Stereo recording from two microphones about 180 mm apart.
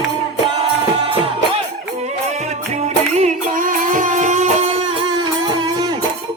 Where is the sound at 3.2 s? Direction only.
50° right (ahead or behind).